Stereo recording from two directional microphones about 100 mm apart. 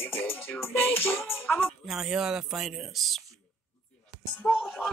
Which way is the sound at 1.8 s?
5° right (ahead or behind).